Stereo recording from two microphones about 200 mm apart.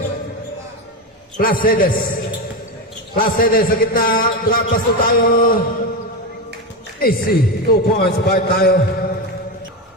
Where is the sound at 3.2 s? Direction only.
45° left (ahead or behind).